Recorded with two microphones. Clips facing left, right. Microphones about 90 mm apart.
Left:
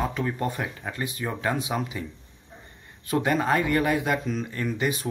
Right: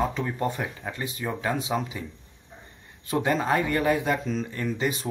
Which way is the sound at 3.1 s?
25° right (ahead or behind).